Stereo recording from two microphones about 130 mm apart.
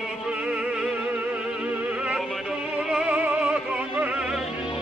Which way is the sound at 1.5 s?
5° right (ahead or behind).